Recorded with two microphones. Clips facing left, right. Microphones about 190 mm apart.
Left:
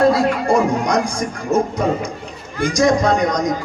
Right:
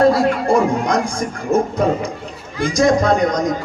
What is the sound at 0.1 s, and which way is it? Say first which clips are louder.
A man's voice: right 1 dB; 55° right (ahead or behind).